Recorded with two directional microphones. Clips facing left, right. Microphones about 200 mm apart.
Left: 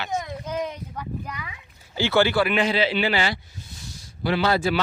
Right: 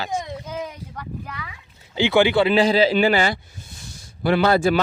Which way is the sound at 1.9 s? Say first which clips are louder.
Right 3 dB; 15° right (ahead or behind).